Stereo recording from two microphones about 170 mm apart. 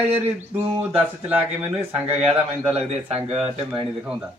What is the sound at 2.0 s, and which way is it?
Speech, 40° right (ahead or behind).